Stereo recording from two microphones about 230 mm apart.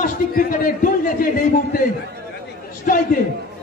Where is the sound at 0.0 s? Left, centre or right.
Left.